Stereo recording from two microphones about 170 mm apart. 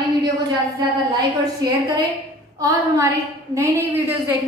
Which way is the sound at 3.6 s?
10° right (ahead or behind).